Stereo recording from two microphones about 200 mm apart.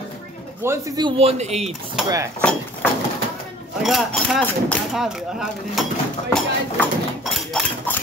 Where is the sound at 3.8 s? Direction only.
Centre (ahead or behind).